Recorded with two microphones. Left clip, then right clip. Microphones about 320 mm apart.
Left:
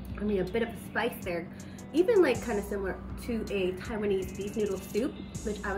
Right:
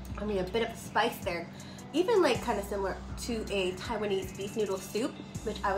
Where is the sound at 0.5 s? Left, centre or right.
Centre.